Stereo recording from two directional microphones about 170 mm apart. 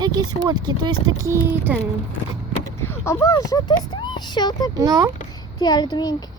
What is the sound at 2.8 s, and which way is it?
Speech, 15° left (ahead or behind).